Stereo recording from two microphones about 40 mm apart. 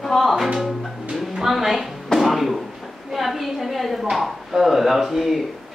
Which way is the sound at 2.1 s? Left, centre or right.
Centre.